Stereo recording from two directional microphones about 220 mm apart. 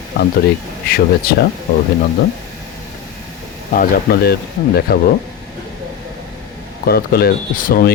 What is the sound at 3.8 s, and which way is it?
Speech, 45° left (ahead or behind).